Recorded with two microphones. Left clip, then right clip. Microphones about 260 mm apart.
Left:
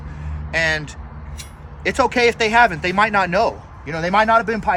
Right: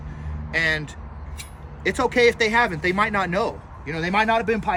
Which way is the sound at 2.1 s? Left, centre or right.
Left.